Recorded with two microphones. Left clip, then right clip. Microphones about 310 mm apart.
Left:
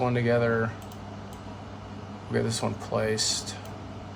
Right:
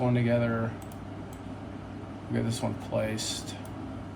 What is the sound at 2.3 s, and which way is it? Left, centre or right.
Speech, left.